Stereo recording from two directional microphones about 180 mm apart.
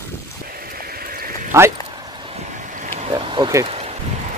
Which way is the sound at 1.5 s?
20° right (ahead or behind).